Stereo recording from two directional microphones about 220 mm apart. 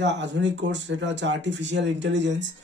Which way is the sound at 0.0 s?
55° right (ahead or behind).